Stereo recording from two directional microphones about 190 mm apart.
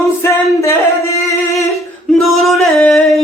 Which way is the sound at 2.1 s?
Centre (ahead or behind).